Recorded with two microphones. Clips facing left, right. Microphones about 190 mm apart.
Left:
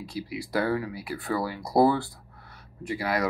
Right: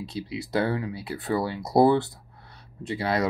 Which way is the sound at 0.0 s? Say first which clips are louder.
Right 1 dB; 25° right (ahead or behind).